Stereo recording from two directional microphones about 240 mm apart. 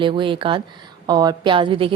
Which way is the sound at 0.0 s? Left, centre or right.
Right.